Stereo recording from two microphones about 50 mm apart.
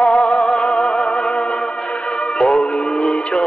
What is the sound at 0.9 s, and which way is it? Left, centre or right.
Music, centre.